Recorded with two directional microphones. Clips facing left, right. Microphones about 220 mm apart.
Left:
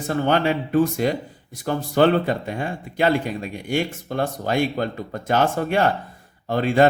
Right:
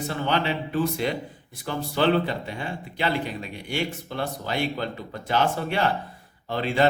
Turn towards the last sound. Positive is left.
turn(degrees=45)  # may be behind; listen again after turning